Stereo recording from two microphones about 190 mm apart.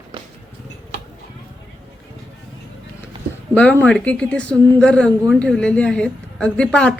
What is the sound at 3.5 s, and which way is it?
A woman's voice, 10° left (ahead or behind).